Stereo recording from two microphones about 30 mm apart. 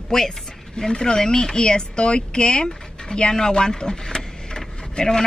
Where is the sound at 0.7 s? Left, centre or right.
Left.